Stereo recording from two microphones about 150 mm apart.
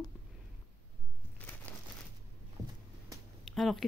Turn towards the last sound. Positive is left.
turn(degrees=0)  # may be behind; listen again after turning